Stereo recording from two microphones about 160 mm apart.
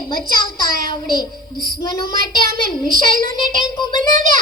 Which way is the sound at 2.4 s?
60° right (ahead or behind).